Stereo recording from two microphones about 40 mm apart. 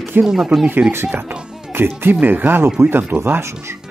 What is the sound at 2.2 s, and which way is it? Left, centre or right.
Speech, right.